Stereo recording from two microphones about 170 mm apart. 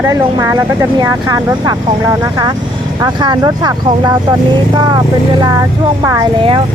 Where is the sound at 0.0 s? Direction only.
20° right (ahead or behind).